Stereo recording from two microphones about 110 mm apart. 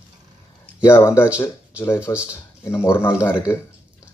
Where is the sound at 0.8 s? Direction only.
25° left (ahead or behind).